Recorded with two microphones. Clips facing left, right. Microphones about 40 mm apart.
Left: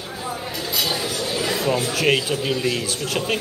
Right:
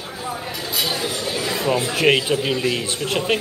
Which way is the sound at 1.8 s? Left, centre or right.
Right.